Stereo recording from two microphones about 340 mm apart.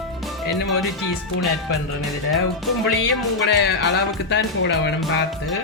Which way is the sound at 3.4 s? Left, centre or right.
Left.